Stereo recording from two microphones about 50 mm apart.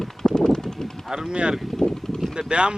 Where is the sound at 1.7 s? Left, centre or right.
Centre.